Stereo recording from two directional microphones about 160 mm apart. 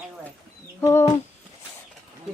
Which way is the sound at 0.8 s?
15° left (ahead or behind).